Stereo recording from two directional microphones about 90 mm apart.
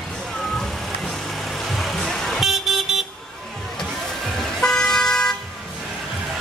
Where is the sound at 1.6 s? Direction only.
Centre (ahead or behind).